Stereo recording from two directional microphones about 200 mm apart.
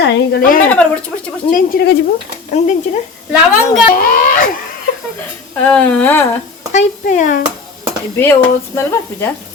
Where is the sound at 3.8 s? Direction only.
45° left (ahead or behind).